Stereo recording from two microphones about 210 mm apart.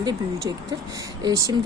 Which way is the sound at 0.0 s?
20° right (ahead or behind).